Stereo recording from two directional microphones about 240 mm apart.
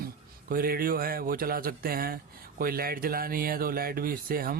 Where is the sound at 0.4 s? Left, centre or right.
Right.